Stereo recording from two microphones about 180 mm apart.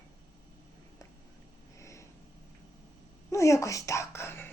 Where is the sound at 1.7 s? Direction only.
15° left (ahead or behind).